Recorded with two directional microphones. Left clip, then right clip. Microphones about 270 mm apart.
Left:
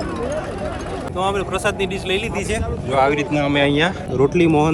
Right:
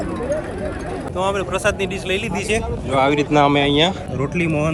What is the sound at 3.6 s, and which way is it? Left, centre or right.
Speech, left.